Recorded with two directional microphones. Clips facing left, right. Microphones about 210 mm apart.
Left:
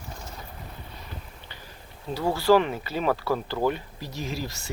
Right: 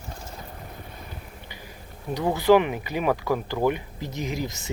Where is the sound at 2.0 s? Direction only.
15° right (ahead or behind).